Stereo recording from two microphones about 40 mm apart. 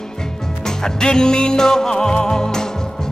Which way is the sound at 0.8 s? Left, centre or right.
Centre.